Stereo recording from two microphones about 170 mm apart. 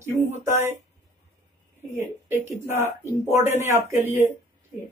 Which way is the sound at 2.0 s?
15° right (ahead or behind).